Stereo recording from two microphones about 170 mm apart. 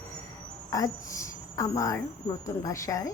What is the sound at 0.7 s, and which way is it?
A woman's voice, 20° left (ahead or behind).